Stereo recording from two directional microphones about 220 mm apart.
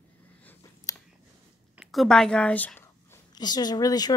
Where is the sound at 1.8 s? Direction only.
Centre (ahead or behind).